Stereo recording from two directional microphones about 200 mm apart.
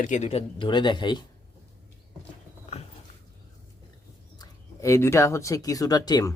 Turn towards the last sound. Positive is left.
turn(degrees=20)  # may be behind; listen again after turning